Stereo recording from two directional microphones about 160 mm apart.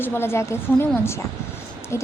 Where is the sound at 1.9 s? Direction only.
15° left (ahead or behind).